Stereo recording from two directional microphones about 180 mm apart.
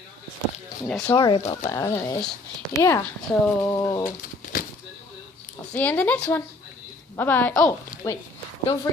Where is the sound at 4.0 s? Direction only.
50° left (ahead or behind).